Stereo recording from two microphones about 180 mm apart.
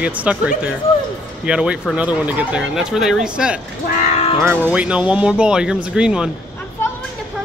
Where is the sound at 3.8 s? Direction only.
40° left (ahead or behind).